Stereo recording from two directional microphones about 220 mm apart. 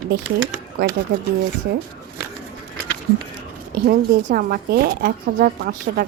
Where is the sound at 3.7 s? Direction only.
45° right (ahead or behind).